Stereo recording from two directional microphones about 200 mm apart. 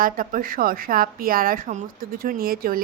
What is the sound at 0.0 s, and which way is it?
A woman's voice, 45° right (ahead or behind).